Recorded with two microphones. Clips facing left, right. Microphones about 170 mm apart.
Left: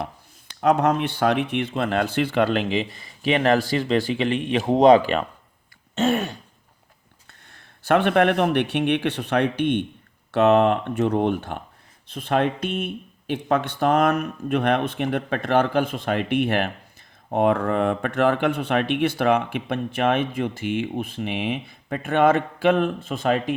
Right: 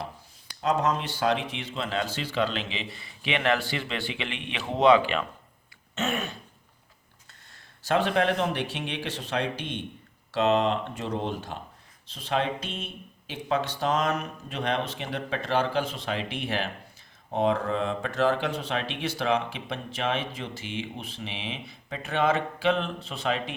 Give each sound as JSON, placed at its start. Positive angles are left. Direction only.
{"t": 0.6, "sound": "speech", "side_deg": 60}
{"t": 5.9, "sound": "throat clearing", "side_deg": 35}
{"t": 7.3, "sound": "speech", "side_deg": 60}